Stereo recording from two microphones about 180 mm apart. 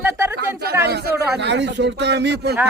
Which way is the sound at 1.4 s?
75° right (ahead or behind).